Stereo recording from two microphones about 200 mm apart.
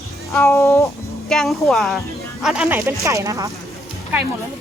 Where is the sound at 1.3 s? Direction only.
Centre (ahead or behind); by 3.5 s 15° right (ahead or behind).